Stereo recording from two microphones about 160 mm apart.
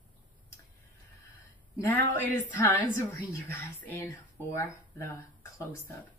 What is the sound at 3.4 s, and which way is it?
A woman's voice, 15° left (ahead or behind).